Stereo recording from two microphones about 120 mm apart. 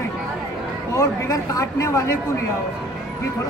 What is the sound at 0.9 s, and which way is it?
A man's voice, 30° left (ahead or behind).